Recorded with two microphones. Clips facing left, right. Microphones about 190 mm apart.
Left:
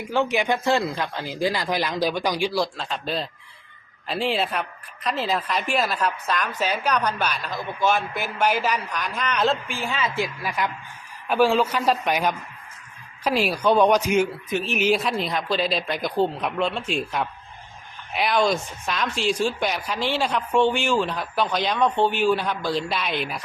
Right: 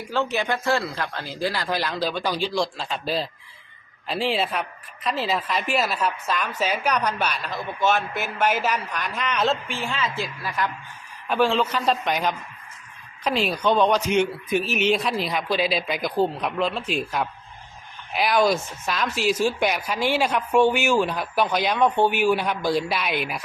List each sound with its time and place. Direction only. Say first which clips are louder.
0.0 s speech: left 2 dB; 15° left (ahead or behind)
2.7 s a woman's voice: right 1 dB; 5° right (ahead or behind)
10.0 s speech: left 2 dB; 15° left (ahead or behind)
14.5 s speech: right 4 dB; 10° right (ahead or behind)
14.8 s a woman's voice: even; 5° left (ahead or behind)